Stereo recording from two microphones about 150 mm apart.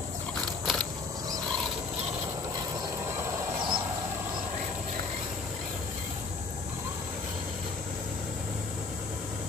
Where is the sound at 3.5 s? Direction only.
35° right (ahead or behind).